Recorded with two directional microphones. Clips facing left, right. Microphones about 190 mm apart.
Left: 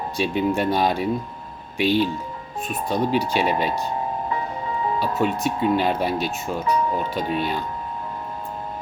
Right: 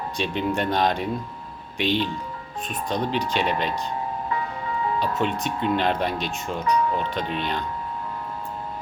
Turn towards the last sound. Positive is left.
turn(degrees=5)  # may be behind; listen again after turning